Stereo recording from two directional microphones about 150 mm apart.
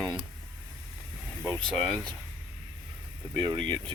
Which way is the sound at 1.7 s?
5° left (ahead or behind).